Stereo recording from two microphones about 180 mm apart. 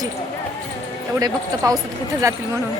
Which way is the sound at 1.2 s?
20° right (ahead or behind).